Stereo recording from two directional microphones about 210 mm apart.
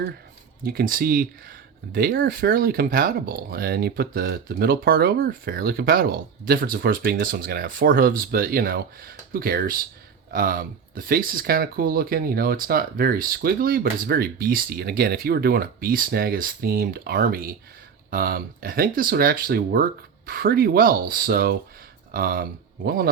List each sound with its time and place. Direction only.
0.6 s speech: 45° right (ahead or behind)